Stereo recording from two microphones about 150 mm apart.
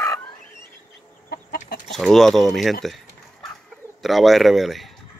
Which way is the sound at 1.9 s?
Centre (ahead or behind).